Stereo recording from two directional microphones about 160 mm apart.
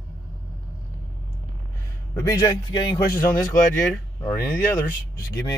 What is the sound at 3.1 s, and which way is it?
Speech, 15° left (ahead or behind).